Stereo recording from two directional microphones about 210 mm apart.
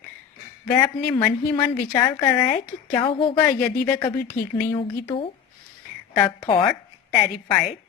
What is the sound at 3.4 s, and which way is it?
A woman's voice, 15° left (ahead or behind).